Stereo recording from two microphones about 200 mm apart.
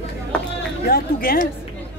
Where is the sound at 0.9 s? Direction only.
50° left (ahead or behind).